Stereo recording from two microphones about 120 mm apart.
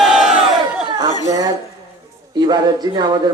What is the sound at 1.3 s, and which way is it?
Speech, 30° right (ahead or behind).